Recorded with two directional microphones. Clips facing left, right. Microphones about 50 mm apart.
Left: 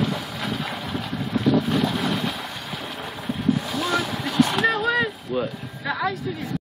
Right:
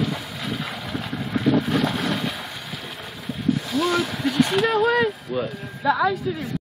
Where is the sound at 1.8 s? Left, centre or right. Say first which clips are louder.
Even; right.